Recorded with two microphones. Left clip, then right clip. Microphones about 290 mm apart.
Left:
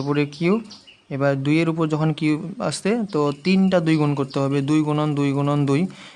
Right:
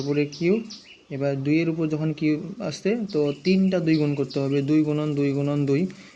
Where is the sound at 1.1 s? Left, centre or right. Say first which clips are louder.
Left 4 dB; left.